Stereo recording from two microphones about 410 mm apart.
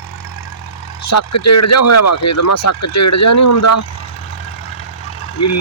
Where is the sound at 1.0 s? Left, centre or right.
Left.